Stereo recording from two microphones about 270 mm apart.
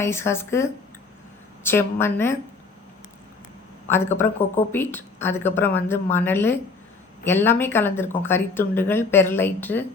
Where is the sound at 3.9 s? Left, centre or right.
Centre.